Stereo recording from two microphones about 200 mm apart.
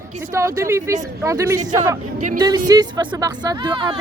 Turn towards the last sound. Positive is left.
turn(degrees=-20)  # may be behind; listen again after turning